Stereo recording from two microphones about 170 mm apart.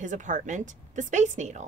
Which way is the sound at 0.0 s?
45° right (ahead or behind).